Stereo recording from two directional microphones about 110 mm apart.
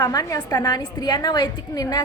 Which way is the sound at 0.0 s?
35° left (ahead or behind).